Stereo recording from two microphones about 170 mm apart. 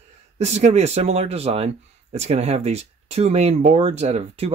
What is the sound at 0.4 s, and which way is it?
Speech, 40° right (ahead or behind).